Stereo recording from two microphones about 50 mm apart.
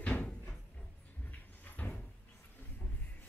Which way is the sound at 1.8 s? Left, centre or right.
Left.